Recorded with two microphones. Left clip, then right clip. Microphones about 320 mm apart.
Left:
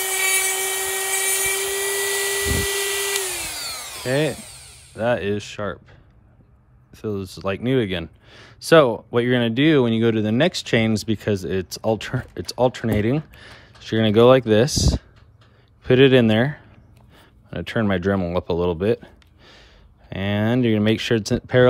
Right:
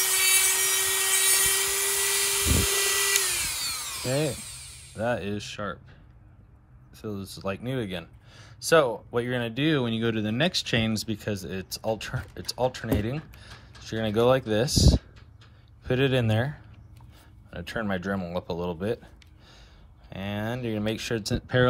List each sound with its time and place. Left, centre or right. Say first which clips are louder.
0.0 s tools: left 3 dB; centre
4.4 s a sound: left 1 dB; centre
5.0 s speech: left 7 dB; left
7.0 s a man's voice: left 8 dB; left
17.6 s speech: left 8 dB; left
20.1 s speech: left 9 dB; left